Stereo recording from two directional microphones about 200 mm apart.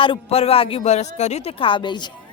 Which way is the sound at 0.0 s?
30° left (ahead or behind).